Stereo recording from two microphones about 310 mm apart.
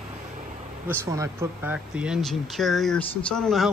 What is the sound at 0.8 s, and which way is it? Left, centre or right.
Speech, centre.